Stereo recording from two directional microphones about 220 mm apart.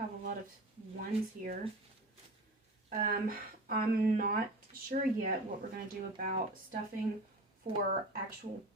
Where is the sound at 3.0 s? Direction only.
40° right (ahead or behind).